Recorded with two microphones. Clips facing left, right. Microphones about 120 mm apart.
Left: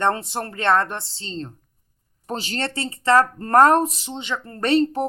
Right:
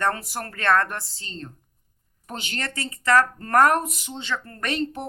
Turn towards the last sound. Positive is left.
turn(degrees=35)  # may be behind; listen again after turning